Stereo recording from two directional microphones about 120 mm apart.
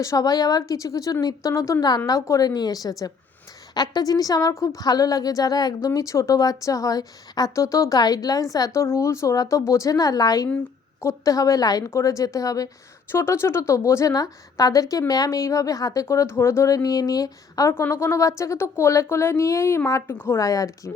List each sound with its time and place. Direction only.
0.0 s a woman's voice: 30° left (ahead or behind)